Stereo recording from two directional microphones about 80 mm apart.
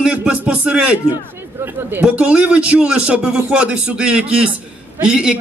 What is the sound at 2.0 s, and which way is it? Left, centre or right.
A man's voice, centre.